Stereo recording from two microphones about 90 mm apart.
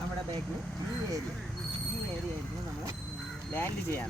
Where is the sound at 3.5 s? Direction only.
25° left (ahead or behind).